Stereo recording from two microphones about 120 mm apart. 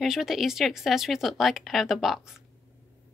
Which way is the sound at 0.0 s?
5° right (ahead or behind).